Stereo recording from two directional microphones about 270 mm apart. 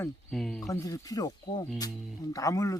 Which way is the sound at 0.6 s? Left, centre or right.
Centre.